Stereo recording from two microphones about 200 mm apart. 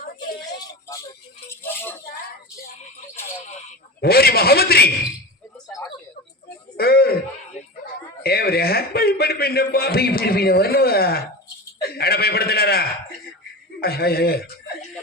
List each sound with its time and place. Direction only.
1.6 s speech: 10° left (ahead or behind)
4.0 s a man's voice: 50° left (ahead or behind)
6.7 s a sound: 50° left (ahead or behind)
8.2 s a man's voice: 50° left (ahead or behind)